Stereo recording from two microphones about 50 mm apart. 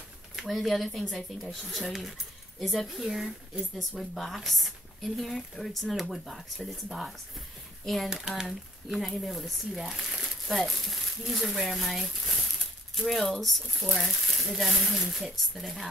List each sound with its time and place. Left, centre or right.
0.5 s speech: centre
3.7 s speech: centre
8.1 s speech: centre